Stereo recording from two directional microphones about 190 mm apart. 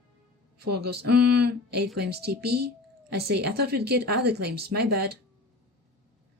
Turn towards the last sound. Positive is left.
turn(degrees=-60)  # may be behind; listen again after turning